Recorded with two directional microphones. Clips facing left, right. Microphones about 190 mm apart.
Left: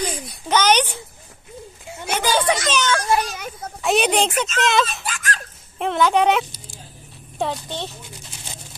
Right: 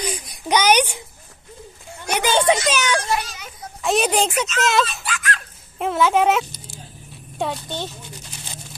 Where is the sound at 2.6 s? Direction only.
10° right (ahead or behind).